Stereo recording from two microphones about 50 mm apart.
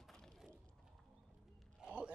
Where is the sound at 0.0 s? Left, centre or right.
Centre.